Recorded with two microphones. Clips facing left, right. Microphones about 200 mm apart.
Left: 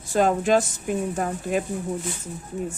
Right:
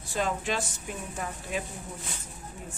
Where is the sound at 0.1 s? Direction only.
45° left (ahead or behind).